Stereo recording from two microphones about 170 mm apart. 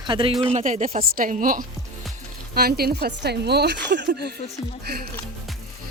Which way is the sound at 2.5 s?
65° right (ahead or behind).